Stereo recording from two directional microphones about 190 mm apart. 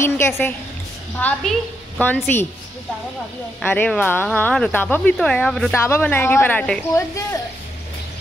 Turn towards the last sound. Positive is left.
turn(degrees=15)  # may be behind; listen again after turning